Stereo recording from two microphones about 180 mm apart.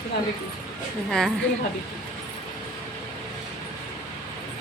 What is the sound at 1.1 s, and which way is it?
Speech, 5° left (ahead or behind).